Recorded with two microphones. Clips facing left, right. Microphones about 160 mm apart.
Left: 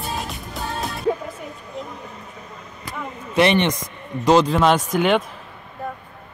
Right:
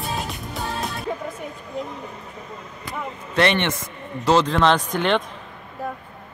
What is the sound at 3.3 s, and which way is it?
Speech, 15° left (ahead or behind).